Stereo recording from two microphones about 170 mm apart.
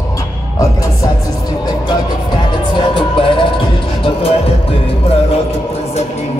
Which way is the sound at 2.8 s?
30° left (ahead or behind).